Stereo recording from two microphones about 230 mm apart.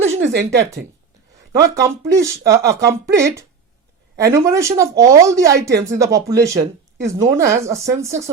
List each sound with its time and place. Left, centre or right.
0.2 s speech: right
1.7 s speech: centre